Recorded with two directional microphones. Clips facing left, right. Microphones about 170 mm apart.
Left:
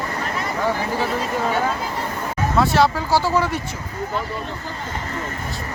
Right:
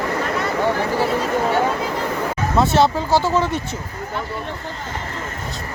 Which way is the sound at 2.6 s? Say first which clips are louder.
Right 1 dB; 25° right (ahead or behind).